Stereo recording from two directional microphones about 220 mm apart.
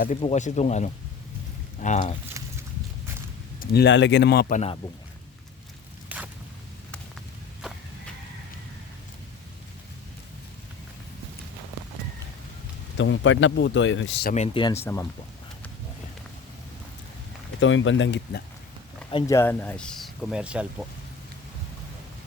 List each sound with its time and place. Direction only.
0.2 s speech: 30° left (ahead or behind)
2.4 s a sound: 15° right (ahead or behind)
3.6 s a man's voice: 45° left (ahead or behind)
6.1 s a sound: 5° right (ahead or behind)
13.0 s speech: 55° left (ahead or behind)
14.3 s speech: 25° left (ahead or behind)
17.6 s speech: 60° left (ahead or behind)
19.1 s speech: 15° left (ahead or behind); by 20.8 s 5° right (ahead or behind)